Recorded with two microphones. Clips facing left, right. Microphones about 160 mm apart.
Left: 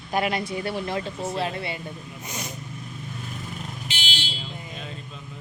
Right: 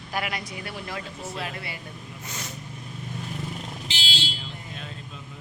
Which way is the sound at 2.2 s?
15° left (ahead or behind).